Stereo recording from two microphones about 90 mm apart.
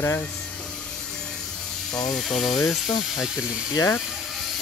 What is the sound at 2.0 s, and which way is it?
Speech, 5° left (ahead or behind).